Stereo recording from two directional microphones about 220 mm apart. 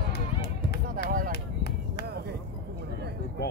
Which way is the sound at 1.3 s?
45° left (ahead or behind).